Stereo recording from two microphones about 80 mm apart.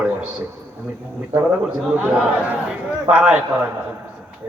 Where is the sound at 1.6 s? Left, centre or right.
Centre.